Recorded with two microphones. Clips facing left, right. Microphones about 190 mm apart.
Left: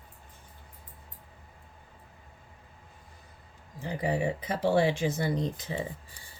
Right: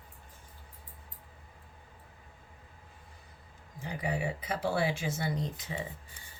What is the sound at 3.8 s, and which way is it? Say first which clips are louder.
Speech: left 5 dB; 35° left (ahead or behind).